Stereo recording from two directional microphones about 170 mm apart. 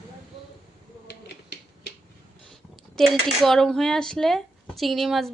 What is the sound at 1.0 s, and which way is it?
Finger snapping, 80° left.